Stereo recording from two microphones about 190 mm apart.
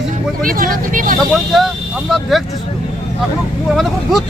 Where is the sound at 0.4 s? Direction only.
50° right (ahead or behind).